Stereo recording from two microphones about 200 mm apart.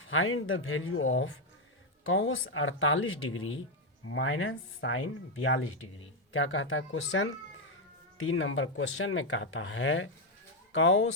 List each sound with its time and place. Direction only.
0.1 s speech: 85° left
6.3 s speech: 75° left (ahead or behind)
8.3 s speech: 80° left